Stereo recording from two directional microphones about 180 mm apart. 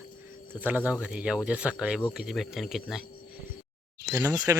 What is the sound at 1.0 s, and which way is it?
Speech, 5° right (ahead or behind).